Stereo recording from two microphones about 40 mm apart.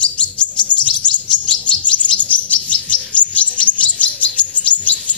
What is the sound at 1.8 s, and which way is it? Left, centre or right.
Chirp, left.